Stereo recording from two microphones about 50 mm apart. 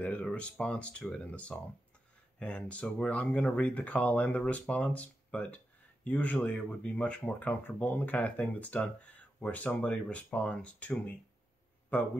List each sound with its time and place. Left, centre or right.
0.0 s speech: left
7.4 s speech: left